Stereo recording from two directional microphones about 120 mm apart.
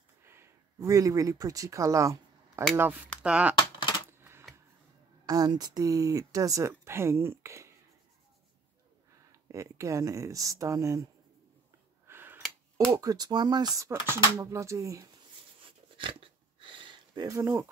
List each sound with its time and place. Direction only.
0.3 s speech: 20° right (ahead or behind)
2.7 s speech: 15° right (ahead or behind)
4.2 s typewriter: 20° right (ahead or behind)
5.2 s speech: 30° right (ahead or behind)
9.3 s speech: 25° right (ahead or behind)
12.1 s a sound: 15° right (ahead or behind)
12.9 s speech: 30° right (ahead or behind)
15.6 s a sound: 45° right (ahead or behind); by 17.6 s 25° right (ahead or behind)